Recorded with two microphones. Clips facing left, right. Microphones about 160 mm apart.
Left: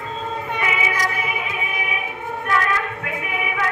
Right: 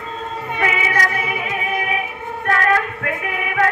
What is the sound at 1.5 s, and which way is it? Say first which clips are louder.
Music: right 5 dB; 50° right (ahead or behind).